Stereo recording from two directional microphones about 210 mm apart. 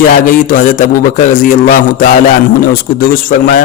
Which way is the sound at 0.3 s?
40° left (ahead or behind).